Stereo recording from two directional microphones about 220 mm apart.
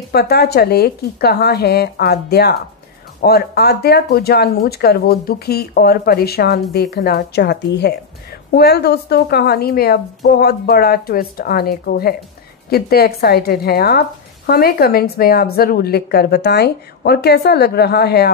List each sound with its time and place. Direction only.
0.1 s speech: 45° left (ahead or behind)